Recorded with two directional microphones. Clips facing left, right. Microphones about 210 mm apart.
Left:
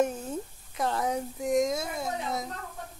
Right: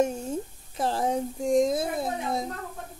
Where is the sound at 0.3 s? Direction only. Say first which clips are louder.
Right 3 dB; 30° right (ahead or behind).